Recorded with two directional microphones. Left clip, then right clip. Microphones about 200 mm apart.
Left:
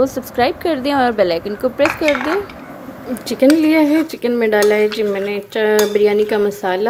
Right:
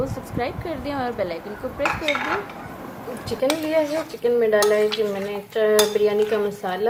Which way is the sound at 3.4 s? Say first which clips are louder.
Left 9 dB; 50° left (ahead or behind).